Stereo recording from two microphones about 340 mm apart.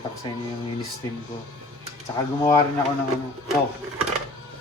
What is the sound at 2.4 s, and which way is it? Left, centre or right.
Speech, centre.